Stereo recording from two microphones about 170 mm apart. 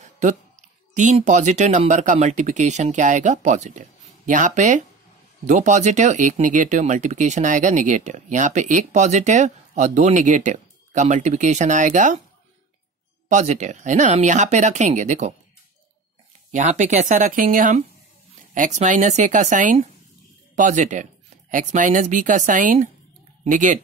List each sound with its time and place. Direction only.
0.0 s a sound: 45° right (ahead or behind)
0.9 s speech: 45° right (ahead or behind)
13.3 s speech: 45° right (ahead or behind)
16.5 s speech: 45° right (ahead or behind)